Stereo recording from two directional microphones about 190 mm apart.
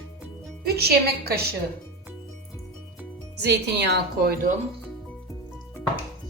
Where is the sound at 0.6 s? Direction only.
55° right (ahead or behind).